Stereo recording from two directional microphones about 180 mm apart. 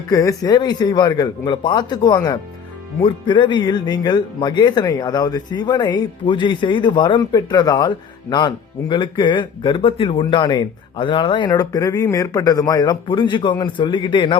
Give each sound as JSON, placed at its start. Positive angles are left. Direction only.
{"t": 0.1, "sound": "speech", "side_deg": 20}